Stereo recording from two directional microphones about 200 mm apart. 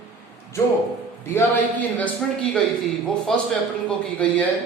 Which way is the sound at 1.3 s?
10° left (ahead or behind).